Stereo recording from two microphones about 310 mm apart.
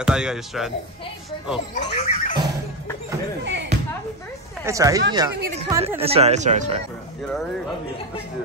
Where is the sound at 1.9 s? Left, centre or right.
Left.